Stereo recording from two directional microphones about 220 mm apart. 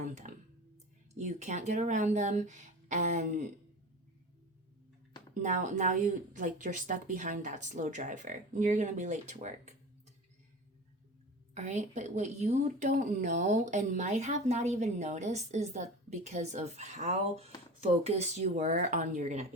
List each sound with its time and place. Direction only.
0.2 s a sound: 35° right (ahead or behind)
1.2 s speech: 35° right (ahead or behind)
5.3 s speech: 35° right (ahead or behind)
11.5 s speech: 30° right (ahead or behind)